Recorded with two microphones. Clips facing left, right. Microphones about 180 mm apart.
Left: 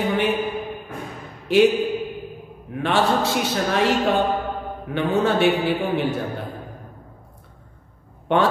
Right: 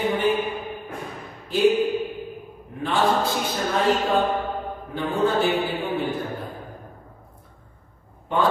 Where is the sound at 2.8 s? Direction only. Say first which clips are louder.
Left 2 dB; 80° left.